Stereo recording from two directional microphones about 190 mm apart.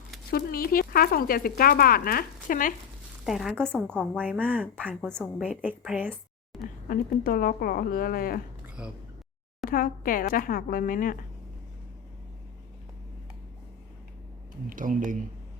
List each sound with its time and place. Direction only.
0.3 s speech: 50° left (ahead or behind)
3.2 s a woman's voice: centre (ahead or behind)
4.4 s speech: 10° right (ahead or behind)
4.9 s a woman's voice: 5° left (ahead or behind)
5.6 s a woman's voice: 5° right (ahead or behind)
6.8 s speech: 50° left (ahead or behind)
8.6 s a sound: 5° right (ahead or behind)
9.6 s speech: 45° left (ahead or behind)
14.7 s speech: 45° right (ahead or behind)